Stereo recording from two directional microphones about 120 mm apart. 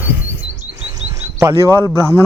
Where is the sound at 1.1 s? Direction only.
25° right (ahead or behind).